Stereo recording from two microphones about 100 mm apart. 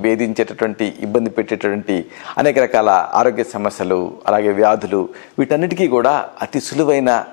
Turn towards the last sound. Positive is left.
turn(degrees=15)  # may be behind; listen again after turning